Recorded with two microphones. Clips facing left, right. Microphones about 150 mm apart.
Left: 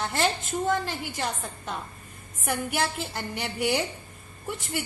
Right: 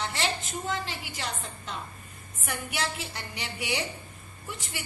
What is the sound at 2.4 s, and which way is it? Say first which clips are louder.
A woman's voice: left 5 dB; 50° left (ahead or behind).